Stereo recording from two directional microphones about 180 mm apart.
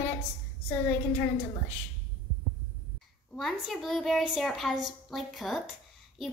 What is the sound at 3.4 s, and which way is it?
Speech, centre (ahead or behind).